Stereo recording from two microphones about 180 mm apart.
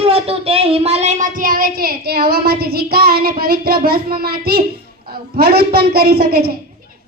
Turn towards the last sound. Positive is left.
turn(degrees=-60)  # may be behind; listen again after turning